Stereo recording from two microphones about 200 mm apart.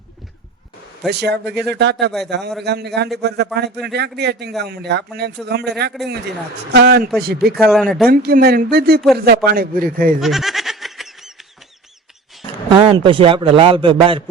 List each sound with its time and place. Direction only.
1.1 s a man's voice: 55° right (ahead or behind)
7.7 s speech: centre (ahead or behind)
8.1 s a man's voice: 50° right (ahead or behind)
10.2 s goat: centre (ahead or behind)
12.7 s a man's voice: 25° right (ahead or behind)